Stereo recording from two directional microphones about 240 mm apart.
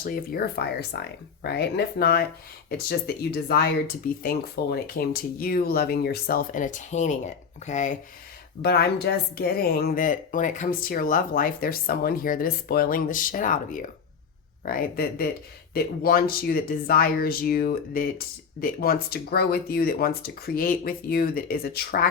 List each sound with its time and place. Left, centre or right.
0.0 s a woman's voice: left
8.6 s a woman's voice: left